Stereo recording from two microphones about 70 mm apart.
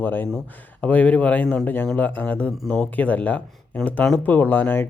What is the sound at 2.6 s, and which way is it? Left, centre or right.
Speech, centre.